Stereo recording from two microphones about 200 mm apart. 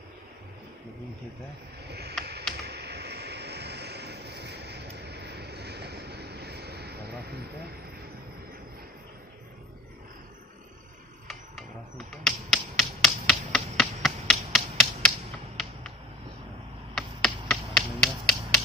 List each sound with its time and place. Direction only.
1.9 s boat: 55° right (ahead or behind)
2.6 s a sound: 55° right (ahead or behind)
12.1 s finger snapping: centre (ahead or behind)
16.9 s finger snapping: centre (ahead or behind)